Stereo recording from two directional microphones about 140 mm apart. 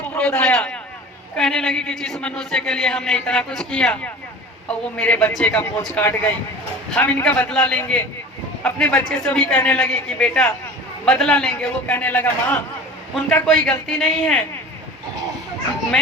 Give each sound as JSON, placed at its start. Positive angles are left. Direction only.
{"t": 0.1, "sound": "a man's voice", "side_deg": 10}